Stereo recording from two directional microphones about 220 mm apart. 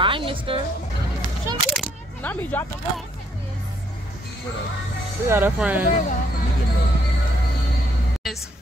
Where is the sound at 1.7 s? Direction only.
5° left (ahead or behind).